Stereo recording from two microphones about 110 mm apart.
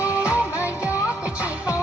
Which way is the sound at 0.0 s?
25° left (ahead or behind).